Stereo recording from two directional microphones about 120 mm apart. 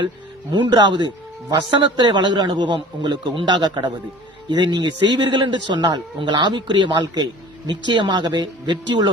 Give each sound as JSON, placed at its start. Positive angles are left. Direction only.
{"t": 0.5, "sound": "a man's voice", "side_deg": -40}